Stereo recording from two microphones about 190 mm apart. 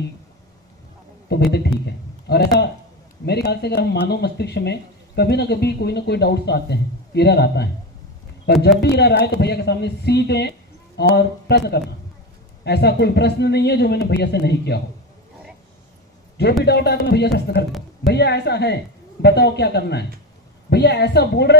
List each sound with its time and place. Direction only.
1.5 s a man's voice: 60° left (ahead or behind)
16.6 s speech: 60° left (ahead or behind)